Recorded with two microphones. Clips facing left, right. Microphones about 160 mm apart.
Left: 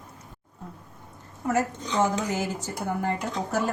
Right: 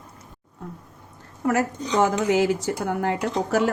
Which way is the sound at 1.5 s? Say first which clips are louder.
Right 3 dB; 75° right (ahead or behind).